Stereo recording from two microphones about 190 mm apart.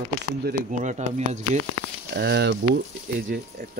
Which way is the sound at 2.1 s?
60° right (ahead or behind).